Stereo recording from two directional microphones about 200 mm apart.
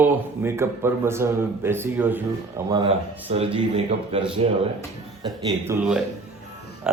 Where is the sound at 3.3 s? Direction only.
30° right (ahead or behind).